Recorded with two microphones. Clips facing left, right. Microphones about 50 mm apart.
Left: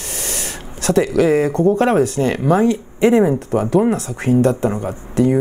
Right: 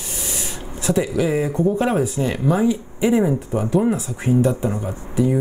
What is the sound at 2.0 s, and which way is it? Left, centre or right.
Speech, left.